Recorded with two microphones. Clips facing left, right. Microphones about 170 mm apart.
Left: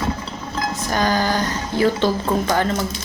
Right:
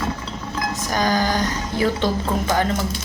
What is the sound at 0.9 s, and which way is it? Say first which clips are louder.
A woman's voice: left 1 dB; 15° right (ahead or behind).